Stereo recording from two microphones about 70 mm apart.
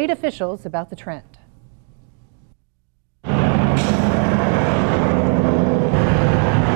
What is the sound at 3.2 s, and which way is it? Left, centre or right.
Vehicle, left.